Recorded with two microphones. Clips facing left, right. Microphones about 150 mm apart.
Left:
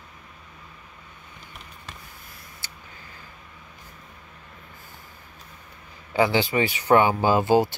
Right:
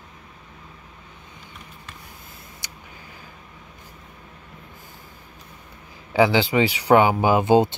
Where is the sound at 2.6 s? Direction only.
15° right (ahead or behind).